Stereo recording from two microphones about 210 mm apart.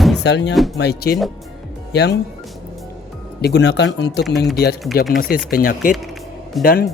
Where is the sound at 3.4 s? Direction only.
50° left (ahead or behind).